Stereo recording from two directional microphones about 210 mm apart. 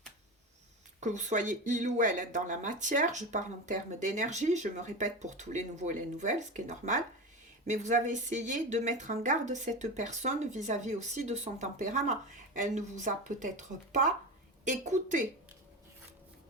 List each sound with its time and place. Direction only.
0.9 s speech: 35° right (ahead or behind)